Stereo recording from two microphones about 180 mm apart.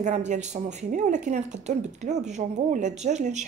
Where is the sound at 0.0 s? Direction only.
40° right (ahead or behind).